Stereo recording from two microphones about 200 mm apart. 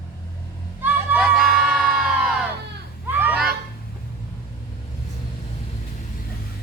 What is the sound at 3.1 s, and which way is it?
Fowl, 10° right (ahead or behind).